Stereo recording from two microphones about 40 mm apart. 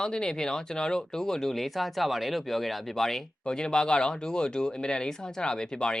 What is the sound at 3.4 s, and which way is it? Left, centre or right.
Speech, centre.